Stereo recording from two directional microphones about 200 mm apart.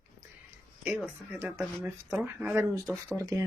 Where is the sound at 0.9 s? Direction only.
10° right (ahead or behind).